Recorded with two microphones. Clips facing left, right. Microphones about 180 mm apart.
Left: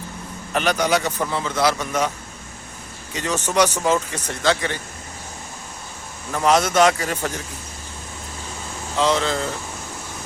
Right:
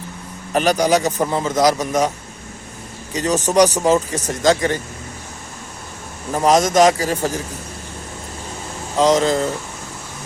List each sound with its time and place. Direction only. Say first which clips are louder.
0.5 s speech: right 4 dB; 35° right (ahead or behind)
6.3 s speech: right 3 dB; 35° right (ahead or behind)
9.0 s speech: right 5 dB; 40° right (ahead or behind)